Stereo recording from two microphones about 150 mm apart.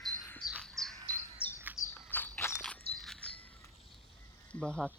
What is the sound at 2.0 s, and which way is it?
Walk, 10° left (ahead or behind).